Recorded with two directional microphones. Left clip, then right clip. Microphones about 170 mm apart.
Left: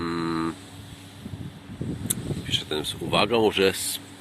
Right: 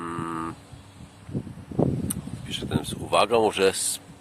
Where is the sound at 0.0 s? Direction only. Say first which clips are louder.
Left 3 dB; centre (ahead or behind).